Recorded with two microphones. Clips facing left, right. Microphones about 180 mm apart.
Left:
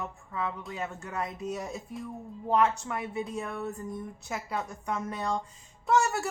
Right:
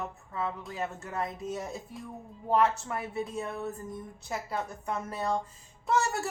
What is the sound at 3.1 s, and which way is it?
A woman's voice, centre (ahead or behind).